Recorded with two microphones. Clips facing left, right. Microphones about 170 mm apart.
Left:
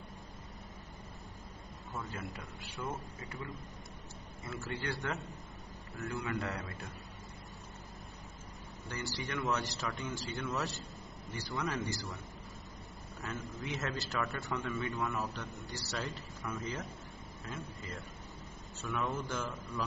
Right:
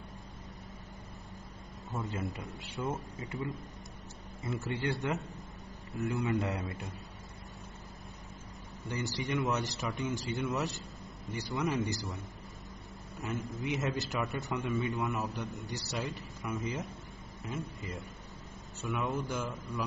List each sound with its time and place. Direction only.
1.9 s a man's voice: 25° right (ahead or behind)
8.8 s a man's voice: 20° right (ahead or behind)
13.7 s a man's voice: 20° right (ahead or behind)